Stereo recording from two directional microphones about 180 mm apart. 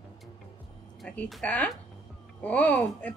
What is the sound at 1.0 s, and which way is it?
A woman's voice, 5° left (ahead or behind).